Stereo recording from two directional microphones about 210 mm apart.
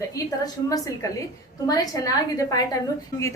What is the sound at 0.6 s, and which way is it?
A woman's voice, 15° left (ahead or behind).